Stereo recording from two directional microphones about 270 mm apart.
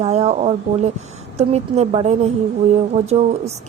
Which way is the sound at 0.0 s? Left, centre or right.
Right.